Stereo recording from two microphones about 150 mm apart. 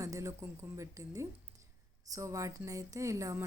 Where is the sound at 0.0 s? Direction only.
20° right (ahead or behind).